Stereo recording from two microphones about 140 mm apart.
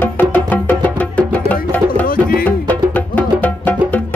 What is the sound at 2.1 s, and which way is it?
Music, 90° left.